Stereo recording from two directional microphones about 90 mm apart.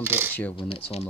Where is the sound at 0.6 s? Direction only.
90° left.